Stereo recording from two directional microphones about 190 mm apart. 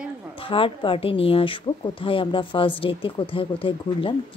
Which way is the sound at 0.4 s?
30° left (ahead or behind).